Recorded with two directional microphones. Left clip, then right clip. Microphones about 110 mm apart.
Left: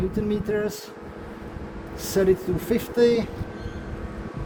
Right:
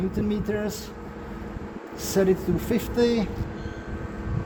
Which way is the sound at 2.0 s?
35° left (ahead or behind).